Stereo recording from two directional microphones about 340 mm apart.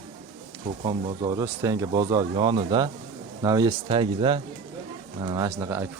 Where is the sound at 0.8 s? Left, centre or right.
Centre.